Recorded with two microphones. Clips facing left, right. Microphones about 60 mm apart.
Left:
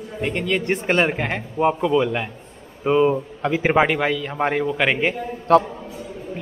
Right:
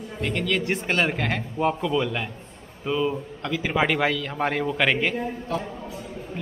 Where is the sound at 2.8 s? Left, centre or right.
Left.